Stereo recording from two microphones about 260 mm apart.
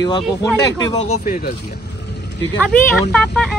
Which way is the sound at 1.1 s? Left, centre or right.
Left.